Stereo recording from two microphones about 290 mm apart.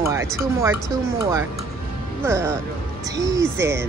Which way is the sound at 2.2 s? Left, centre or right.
Centre.